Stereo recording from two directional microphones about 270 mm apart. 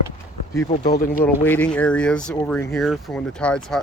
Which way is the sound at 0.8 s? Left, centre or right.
Left.